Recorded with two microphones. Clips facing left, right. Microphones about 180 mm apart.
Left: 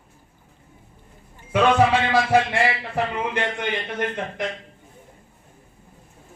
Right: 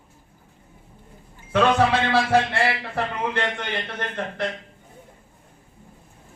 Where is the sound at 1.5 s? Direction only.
10° left (ahead or behind).